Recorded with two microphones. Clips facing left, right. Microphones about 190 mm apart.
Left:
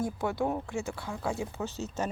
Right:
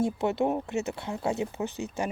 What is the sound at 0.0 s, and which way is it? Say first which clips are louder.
Speech: right 4 dB; 25° right (ahead or behind).